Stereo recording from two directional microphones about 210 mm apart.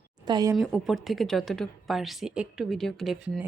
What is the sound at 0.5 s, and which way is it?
A woman's voice, centre (ahead or behind).